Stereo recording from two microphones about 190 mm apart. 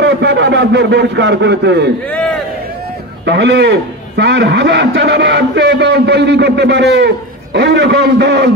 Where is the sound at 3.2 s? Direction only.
65° right (ahead or behind).